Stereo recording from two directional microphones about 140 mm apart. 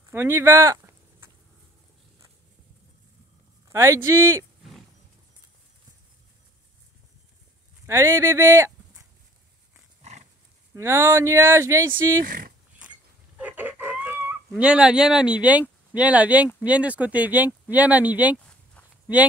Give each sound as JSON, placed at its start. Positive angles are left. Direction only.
{"t": 0.1, "sound": "a sound", "side_deg": -15}
{"t": 3.6, "sound": "speech", "side_deg": -20}
{"t": 7.8, "sound": "speech", "side_deg": -20}
{"t": 10.7, "sound": "speech", "side_deg": -20}
{"t": 12.3, "sound": "speech", "side_deg": -90}
{"t": 13.4, "sound": "chicken", "side_deg": -10}
{"t": 15.9, "sound": "speech", "side_deg": -10}